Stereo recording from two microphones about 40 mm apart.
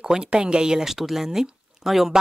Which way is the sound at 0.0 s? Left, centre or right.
Centre.